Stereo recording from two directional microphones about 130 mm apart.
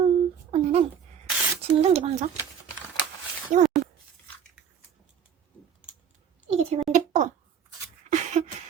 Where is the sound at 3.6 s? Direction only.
65° right (ahead or behind).